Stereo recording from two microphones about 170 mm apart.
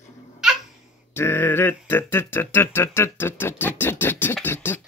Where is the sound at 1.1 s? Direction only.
15° left (ahead or behind).